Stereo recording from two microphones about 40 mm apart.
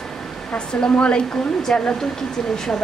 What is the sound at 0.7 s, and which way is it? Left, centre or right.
Speech, left.